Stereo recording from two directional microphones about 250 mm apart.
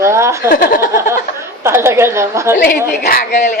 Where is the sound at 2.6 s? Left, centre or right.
Left.